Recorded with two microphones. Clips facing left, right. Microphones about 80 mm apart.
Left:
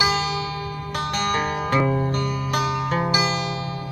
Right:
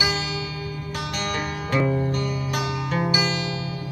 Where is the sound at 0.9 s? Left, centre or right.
Left.